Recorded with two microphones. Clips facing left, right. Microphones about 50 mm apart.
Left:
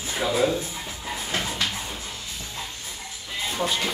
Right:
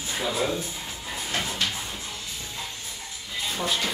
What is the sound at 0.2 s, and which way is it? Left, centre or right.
Speech, centre.